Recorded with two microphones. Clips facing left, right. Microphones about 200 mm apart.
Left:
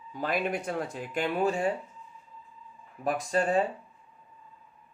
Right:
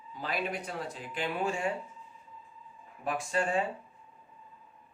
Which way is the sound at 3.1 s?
40° left (ahead or behind).